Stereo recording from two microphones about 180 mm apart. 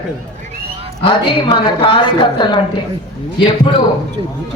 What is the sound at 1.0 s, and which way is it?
A woman's voice, 25° left (ahead or behind).